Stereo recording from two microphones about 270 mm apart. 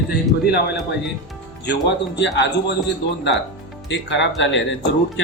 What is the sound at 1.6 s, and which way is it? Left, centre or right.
Speech, left.